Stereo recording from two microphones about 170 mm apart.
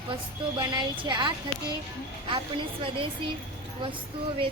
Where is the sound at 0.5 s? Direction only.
25° right (ahead or behind).